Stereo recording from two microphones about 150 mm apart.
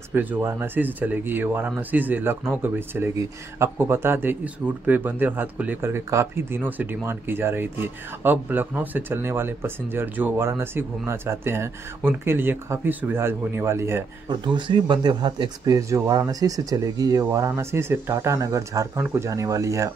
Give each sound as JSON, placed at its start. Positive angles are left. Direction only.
{"t": 0.1, "sound": "speech", "side_deg": -10}
{"t": 14.3, "sound": "speech", "side_deg": -30}